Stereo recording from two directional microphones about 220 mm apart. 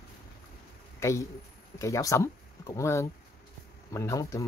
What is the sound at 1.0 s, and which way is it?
Speech, 15° left (ahead or behind).